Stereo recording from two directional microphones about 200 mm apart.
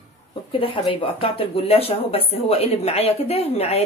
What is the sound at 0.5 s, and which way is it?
Speech, 25° left (ahead or behind).